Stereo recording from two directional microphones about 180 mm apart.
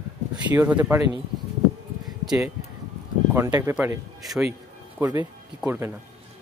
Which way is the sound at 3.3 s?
20° right (ahead or behind).